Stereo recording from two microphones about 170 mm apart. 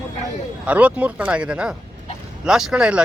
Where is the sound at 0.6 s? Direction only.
10° right (ahead or behind).